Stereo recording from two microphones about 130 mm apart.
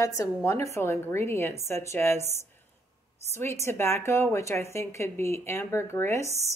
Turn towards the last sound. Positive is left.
turn(degrees=20)  # may be behind; listen again after turning